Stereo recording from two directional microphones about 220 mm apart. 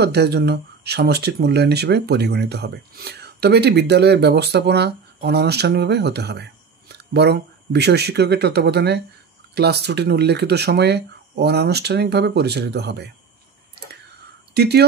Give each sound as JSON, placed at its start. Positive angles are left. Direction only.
{"t": 0.0, "sound": "speech", "side_deg": -50}
{"t": 14.5, "sound": "speech", "side_deg": -50}